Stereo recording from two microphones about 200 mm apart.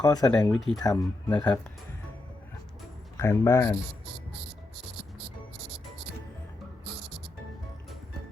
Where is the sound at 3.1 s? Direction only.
15° left (ahead or behind).